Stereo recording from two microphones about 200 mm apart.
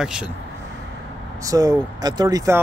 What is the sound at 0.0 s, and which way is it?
Speech, 5° right (ahead or behind).